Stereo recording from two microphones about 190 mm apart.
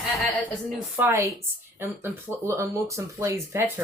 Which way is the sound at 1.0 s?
10° right (ahead or behind).